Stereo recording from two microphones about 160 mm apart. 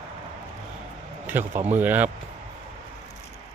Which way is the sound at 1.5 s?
50° right (ahead or behind).